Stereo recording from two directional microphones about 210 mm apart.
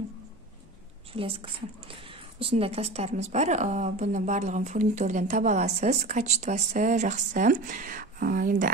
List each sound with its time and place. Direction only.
1.1 s a woman's voice: 25° right (ahead or behind); by 8.6 s 40° right (ahead or behind)